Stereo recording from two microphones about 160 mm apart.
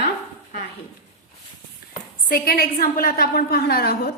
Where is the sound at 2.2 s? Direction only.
65° left (ahead or behind).